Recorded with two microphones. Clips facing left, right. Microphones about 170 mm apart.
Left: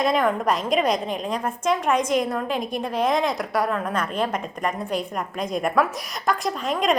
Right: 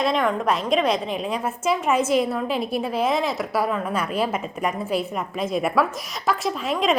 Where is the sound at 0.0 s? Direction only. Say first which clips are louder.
Left 1 dB; centre (ahead or behind).